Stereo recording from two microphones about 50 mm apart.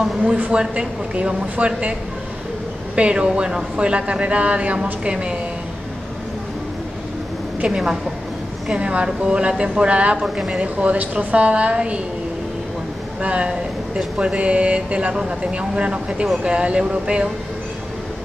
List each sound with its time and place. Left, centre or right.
0.4 s speech: right
3.0 s speech: right
7.6 s a woman's voice: centre
10.2 s a woman's voice: centre
10.5 s speech: right
13.2 s speech: right